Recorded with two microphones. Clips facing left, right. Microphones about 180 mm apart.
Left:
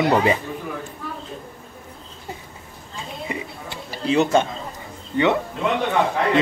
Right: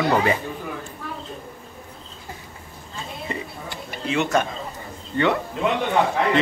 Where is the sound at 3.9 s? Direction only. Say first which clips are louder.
Left 4 dB; 35° left (ahead or behind).